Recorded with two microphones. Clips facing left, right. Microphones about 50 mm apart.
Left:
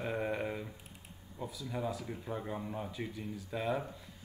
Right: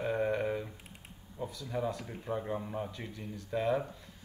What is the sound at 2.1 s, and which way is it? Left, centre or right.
Speech, centre.